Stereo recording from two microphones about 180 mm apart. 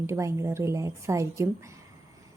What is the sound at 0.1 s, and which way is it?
Speech, 15° right (ahead or behind).